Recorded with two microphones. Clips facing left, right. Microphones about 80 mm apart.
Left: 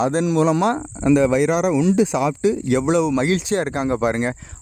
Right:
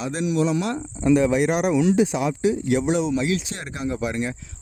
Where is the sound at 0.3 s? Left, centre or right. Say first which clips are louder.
Left 2 dB; left.